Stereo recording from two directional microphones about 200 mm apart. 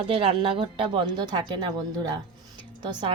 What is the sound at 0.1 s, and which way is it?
A woman's voice, 25° right (ahead or behind).